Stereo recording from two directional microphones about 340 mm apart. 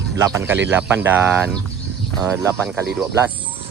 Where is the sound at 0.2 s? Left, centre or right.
Centre.